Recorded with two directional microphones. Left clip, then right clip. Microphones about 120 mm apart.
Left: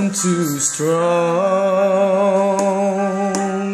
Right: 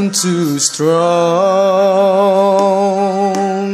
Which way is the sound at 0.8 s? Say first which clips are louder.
Right 4 dB; 65° right (ahead or behind).